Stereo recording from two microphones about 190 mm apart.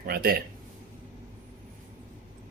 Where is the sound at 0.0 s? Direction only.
50° right (ahead or behind).